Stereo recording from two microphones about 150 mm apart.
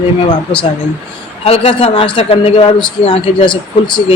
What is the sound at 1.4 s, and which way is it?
A man's voice, 40° left (ahead or behind).